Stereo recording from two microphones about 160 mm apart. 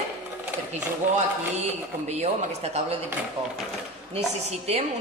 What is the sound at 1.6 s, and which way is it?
Speech, 45° right (ahead or behind).